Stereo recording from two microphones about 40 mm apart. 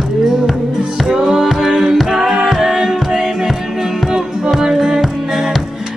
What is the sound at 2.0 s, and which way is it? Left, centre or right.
Music, centre.